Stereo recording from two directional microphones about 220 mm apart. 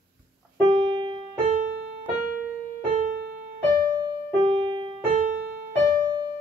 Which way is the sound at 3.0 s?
40° right (ahead or behind).